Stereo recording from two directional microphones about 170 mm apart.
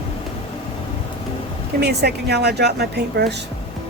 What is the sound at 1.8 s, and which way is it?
A woman's voice, 75° right (ahead or behind).